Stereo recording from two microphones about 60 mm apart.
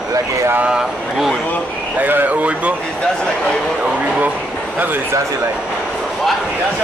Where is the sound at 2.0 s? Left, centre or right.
Right.